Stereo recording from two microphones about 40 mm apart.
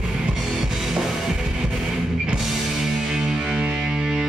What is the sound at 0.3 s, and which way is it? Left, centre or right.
Music, centre.